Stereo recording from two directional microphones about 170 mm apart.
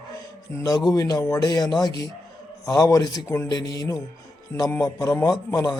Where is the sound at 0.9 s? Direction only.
20° left (ahead or behind).